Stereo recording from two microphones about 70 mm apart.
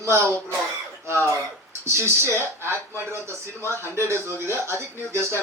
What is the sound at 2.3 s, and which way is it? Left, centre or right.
Speech, right.